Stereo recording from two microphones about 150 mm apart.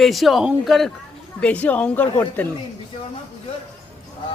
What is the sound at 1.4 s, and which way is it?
Mantra, 10° left (ahead or behind).